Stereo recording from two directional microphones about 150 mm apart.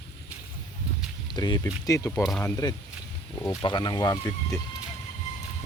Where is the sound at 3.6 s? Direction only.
30° left (ahead or behind).